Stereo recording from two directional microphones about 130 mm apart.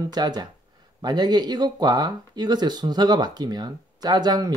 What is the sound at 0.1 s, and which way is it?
Speech, 30° right (ahead or behind).